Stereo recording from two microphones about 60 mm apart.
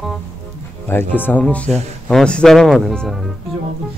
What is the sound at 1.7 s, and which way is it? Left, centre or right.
Speech, centre.